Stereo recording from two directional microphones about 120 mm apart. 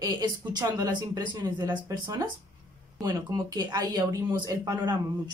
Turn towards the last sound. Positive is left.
turn(degrees=-35)  # may be behind; listen again after turning